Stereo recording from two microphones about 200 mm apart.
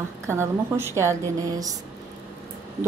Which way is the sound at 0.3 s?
10° right (ahead or behind).